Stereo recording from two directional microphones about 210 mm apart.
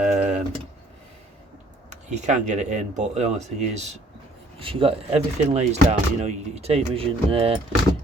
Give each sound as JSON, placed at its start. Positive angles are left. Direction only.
{"t": 0.0, "sound": "tick", "side_deg": -35}
{"t": 1.9, "sound": "speech", "side_deg": -35}